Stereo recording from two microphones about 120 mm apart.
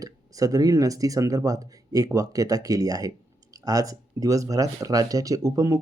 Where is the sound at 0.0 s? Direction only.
30° right (ahead or behind).